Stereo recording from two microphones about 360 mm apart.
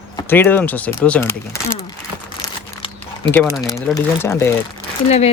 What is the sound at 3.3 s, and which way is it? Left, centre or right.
Speech, centre.